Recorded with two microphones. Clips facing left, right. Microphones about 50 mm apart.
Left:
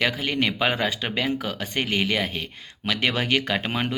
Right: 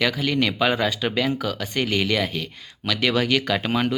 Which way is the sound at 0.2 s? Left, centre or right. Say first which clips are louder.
Right 2 dB; left.